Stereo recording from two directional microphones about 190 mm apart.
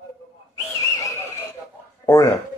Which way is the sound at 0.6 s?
15° left (ahead or behind).